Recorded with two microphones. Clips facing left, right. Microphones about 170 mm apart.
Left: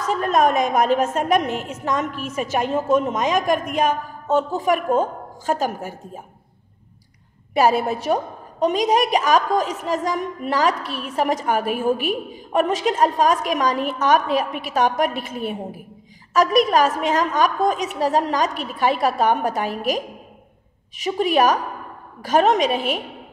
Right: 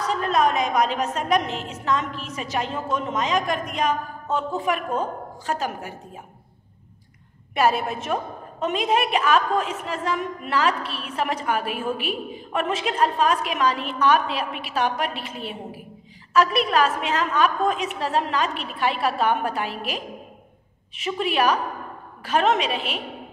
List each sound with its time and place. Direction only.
0.0 s a woman's voice: 45° left (ahead or behind)
7.5 s a woman's voice: 35° left (ahead or behind)
21.0 s a woman's voice: 45° left (ahead or behind)